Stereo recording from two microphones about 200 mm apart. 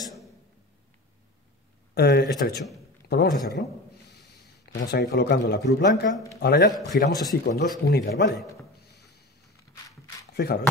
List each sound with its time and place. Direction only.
2.0 s a man's voice: 50° left (ahead or behind)
7.1 s speech: 20° left (ahead or behind)
7.4 s speech: 45° left (ahead or behind)
10.3 s speech: 55° left (ahead or behind)